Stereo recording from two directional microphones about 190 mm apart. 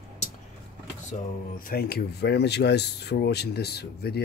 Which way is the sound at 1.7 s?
55° left (ahead or behind).